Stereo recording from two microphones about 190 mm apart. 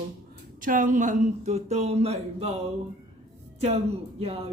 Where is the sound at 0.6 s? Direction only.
45° right (ahead or behind).